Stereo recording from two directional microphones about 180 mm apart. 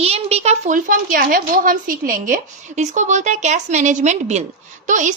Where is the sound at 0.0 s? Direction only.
35° right (ahead or behind).